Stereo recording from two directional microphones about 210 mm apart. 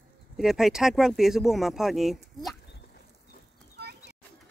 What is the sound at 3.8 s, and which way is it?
Bird, 50° right (ahead or behind).